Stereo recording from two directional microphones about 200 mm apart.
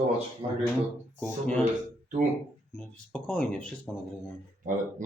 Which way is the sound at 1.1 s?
5° left (ahead or behind).